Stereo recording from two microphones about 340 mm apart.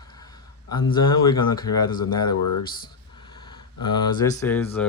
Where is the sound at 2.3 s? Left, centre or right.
Left.